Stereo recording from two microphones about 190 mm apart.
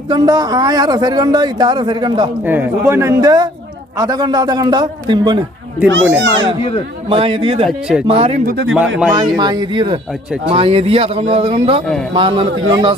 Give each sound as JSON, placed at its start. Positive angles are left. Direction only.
{"t": 0.1, "sound": "a man's voice", "side_deg": -20}
{"t": 2.4, "sound": "a man's voice", "side_deg": -10}
{"t": 5.9, "sound": "a child's voice", "side_deg": -70}
{"t": 7.1, "sound": "a man's voice", "side_deg": -25}
{"t": 7.7, "sound": "speech", "side_deg": -5}
{"t": 8.0, "sound": "a man's voice", "side_deg": -30}